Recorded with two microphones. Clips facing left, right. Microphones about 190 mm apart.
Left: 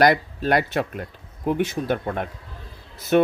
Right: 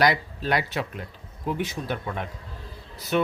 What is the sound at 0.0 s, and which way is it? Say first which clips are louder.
Speech: left 5 dB; 50° left (ahead or behind).